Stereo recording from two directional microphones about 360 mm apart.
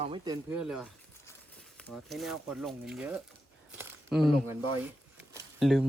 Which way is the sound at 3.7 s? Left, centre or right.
Centre.